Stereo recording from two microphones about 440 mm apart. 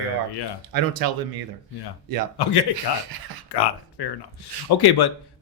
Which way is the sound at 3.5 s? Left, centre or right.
Left.